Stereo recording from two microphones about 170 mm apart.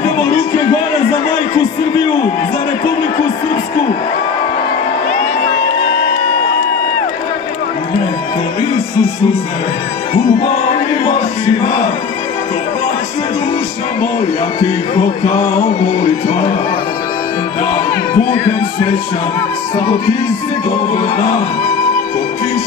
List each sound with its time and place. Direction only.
10.7 s music: 35° left (ahead or behind)
16.0 s music: 35° left (ahead or behind)
17.6 s music: 30° left (ahead or behind)